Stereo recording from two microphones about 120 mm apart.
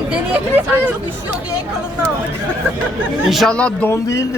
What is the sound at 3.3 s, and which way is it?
Speech, 5° left (ahead or behind).